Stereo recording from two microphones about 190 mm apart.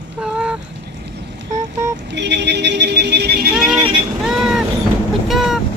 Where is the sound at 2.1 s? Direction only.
65° right (ahead or behind).